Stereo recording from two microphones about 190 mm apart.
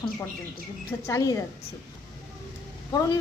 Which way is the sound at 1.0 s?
15° left (ahead or behind).